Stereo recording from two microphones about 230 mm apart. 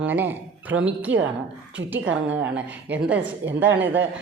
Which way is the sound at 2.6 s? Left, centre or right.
Centre.